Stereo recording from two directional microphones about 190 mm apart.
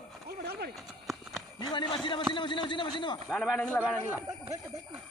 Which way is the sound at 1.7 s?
25° left (ahead or behind).